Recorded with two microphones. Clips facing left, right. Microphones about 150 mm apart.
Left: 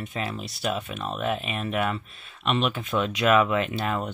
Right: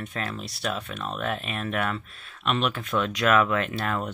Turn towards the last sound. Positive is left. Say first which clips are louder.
# left 1 dB
turn(degrees=0)  # may be behind; listen again after turning